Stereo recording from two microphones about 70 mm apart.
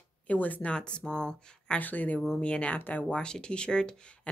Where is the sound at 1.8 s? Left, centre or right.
Left.